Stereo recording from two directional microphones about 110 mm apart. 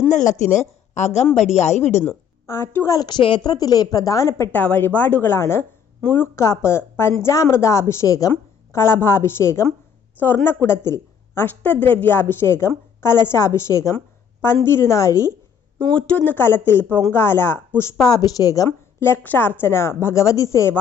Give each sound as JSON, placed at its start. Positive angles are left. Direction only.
{"t": 0.5, "sound": "a woman's voice", "side_deg": 90}
{"t": 2.5, "sound": "a woman's voice", "side_deg": 25}
{"t": 4.5, "sound": "a woman's voice", "side_deg": 15}
{"t": 15.8, "sound": "a woman's voice", "side_deg": 10}
{"t": 18.1, "sound": "a woman's voice", "side_deg": 35}